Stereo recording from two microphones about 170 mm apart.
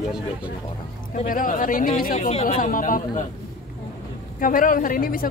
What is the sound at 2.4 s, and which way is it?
Speech, 55° left (ahead or behind).